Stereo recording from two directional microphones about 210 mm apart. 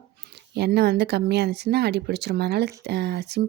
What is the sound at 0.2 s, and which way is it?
A woman's voice, 50° right (ahead or behind).